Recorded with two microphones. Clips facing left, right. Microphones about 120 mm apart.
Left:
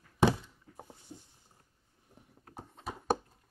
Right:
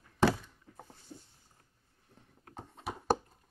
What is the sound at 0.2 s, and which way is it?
Thunk, 15° left (ahead or behind).